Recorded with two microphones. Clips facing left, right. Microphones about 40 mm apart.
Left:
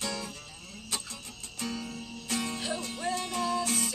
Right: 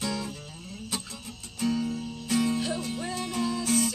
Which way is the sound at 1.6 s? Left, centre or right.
Centre.